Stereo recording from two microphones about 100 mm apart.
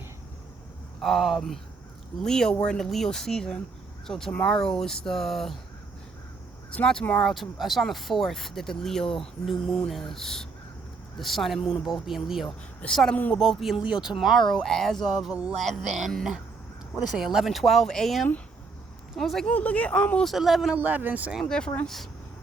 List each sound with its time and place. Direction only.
1.0 s speech: centre (ahead or behind)
6.7 s speech: 10° left (ahead or behind)
19.5 s speech: 15° left (ahead or behind)
20.2 s speech: centre (ahead or behind)
20.7 s speech: 20° right (ahead or behind)
21.4 s speech: 10° left (ahead or behind)